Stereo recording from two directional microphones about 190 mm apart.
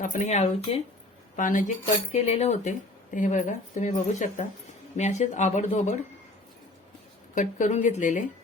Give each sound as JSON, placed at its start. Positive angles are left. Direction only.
{"t": 0.0, "sound": "speech", "side_deg": 40}
{"t": 7.3, "sound": "speech", "side_deg": 40}